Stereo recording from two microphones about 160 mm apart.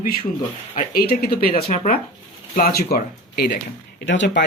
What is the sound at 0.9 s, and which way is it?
Speech, 75° left (ahead or behind).